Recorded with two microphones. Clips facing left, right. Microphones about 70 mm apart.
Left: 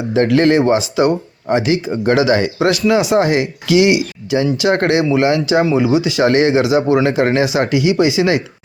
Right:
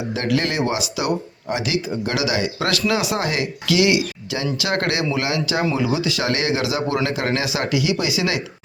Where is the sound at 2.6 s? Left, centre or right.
Left.